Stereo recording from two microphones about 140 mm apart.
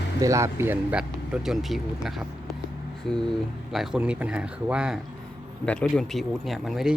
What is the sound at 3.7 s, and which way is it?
Speech, centre (ahead or behind).